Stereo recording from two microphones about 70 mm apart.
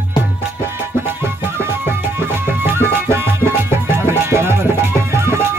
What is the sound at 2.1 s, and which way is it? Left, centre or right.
Music, right.